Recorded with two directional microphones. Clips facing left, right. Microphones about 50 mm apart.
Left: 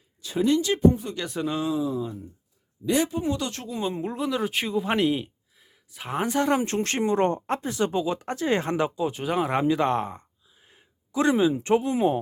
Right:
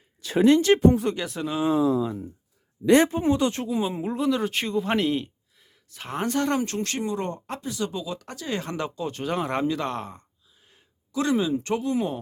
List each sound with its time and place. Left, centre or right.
0.2 s speech: right
1.2 s speech: centre
1.7 s speech: right
2.8 s speech: right
3.2 s speech: right; by 6.7 s centre
6.7 s speech: left
8.7 s speech: centre